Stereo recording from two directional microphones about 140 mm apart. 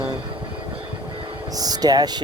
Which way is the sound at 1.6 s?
25° right (ahead or behind).